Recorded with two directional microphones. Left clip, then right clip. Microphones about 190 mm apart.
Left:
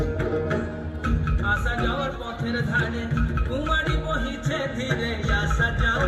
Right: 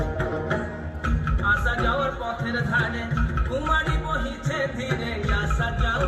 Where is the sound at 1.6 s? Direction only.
30° left (ahead or behind).